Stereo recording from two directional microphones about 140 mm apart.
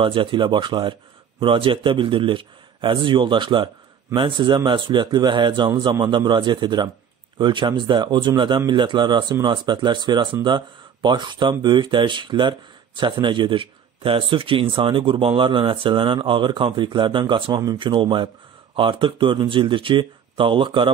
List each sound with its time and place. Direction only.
0.0 s speech: 40° right (ahead or behind)